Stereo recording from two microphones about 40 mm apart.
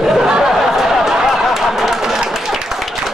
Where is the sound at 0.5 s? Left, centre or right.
Centre.